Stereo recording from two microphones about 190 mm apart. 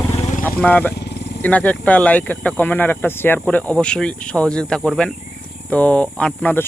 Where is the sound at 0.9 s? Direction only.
60° left (ahead or behind).